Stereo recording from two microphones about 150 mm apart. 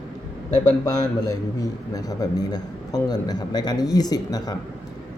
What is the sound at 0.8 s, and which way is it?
A man's voice, 25° left (ahead or behind).